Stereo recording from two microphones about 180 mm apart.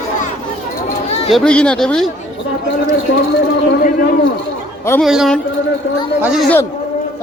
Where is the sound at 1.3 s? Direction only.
5° left (ahead or behind).